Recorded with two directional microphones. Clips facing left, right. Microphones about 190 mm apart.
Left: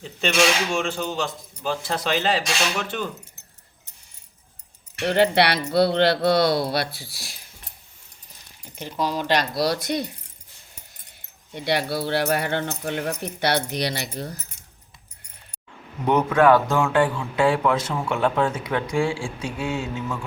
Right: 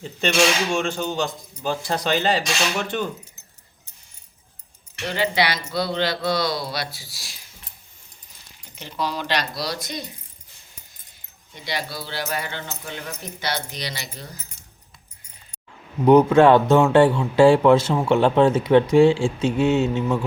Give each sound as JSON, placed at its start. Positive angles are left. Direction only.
{"t": 0.7, "sound": "speech", "side_deg": 5}
{"t": 5.0, "sound": "speech", "side_deg": 60}
{"t": 8.7, "sound": "speech", "side_deg": 45}
{"t": 11.5, "sound": "speech", "side_deg": 60}
{"t": 16.0, "sound": "a man's voice", "side_deg": -30}